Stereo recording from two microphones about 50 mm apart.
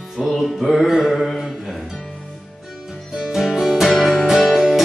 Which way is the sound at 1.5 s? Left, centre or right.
Centre.